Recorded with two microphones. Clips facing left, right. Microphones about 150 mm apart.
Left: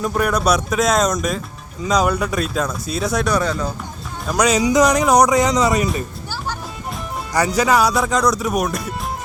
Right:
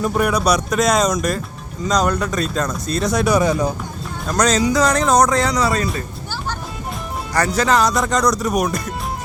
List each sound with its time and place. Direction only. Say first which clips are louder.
0.0 s speech: right 1 dB; centre (ahead or behind)
3.2 s speech: right 3 dB; 10° right (ahead or behind)
4.3 s speech: left 1 dB; 10° left (ahead or behind)
7.3 s speech: left 1 dB; 10° left (ahead or behind)